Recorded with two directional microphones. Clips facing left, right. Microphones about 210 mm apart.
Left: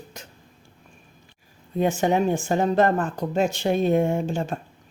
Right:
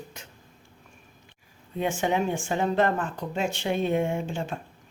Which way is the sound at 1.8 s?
40° left (ahead or behind).